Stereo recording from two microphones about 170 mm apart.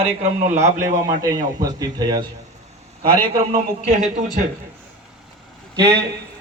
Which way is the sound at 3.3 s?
45° right (ahead or behind).